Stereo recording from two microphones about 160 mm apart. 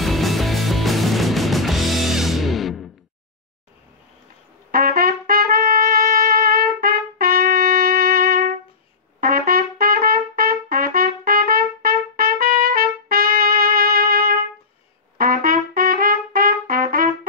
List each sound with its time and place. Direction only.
0.0 s music: centre (ahead or behind)
4.6 s trumpet: 65° right (ahead or behind)